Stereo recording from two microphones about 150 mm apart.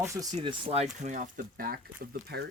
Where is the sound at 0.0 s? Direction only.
20° right (ahead or behind).